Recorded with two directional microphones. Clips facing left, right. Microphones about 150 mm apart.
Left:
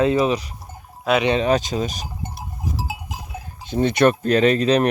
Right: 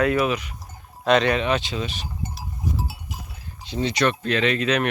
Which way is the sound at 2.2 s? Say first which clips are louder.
Right 1 dB; 70° left (ahead or behind).